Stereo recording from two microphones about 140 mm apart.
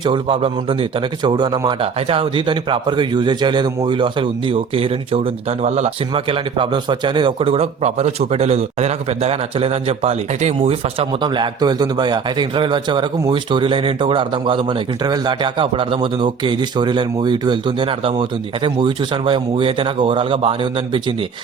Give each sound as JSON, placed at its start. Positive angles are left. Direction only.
{"t": 0.0, "sound": "a man's voice", "side_deg": -35}
{"t": 11.2, "sound": "a man's voice", "side_deg": -35}